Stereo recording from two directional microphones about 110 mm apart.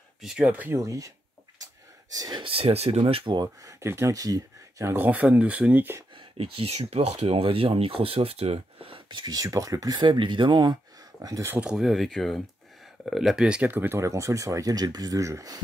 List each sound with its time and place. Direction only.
0.2 s speech: 10° right (ahead or behind)
0.7 s speech: 30° right (ahead or behind)
2.1 s speech: 35° right (ahead or behind)
2.4 s speech: 60° right (ahead or behind)
3.8 s speech: 25° right (ahead or behind)
6.1 s speech: 60° right (ahead or behind); by 11.5 s 30° right (ahead or behind)
11.5 s speech: 5° right (ahead or behind); by 15.6 s 30° right (ahead or behind)